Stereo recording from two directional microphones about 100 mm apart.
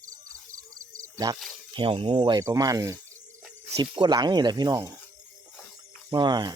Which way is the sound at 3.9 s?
50° right (ahead or behind).